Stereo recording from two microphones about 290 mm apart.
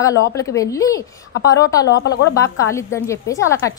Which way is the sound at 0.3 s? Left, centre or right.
Centre.